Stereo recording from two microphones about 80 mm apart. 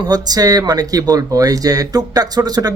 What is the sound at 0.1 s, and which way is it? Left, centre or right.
Speech, right.